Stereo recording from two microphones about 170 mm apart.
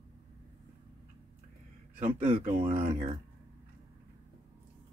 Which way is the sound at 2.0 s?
45° right (ahead or behind).